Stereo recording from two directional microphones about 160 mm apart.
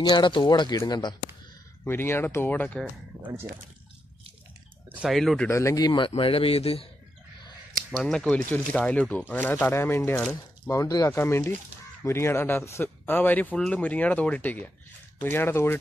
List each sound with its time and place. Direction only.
0.1 s speech: 30° left (ahead or behind)
1.9 s speech: 15° left (ahead or behind)
2.8 s speech: 10° right (ahead or behind)
4.9 s speech: centre (ahead or behind)
5.5 s a man's voice: 20° left (ahead or behind); by 6.9 s 35° left (ahead or behind)
7.9 s speech: 5° left (ahead or behind)